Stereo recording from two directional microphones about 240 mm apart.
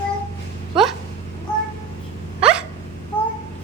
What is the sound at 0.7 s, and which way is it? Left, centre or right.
Speech, centre.